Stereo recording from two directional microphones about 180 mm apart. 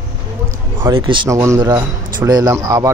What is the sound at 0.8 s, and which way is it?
Speech, 25° right (ahead or behind).